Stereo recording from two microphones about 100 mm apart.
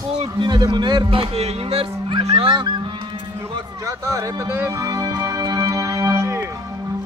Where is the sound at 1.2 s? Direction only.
85° right.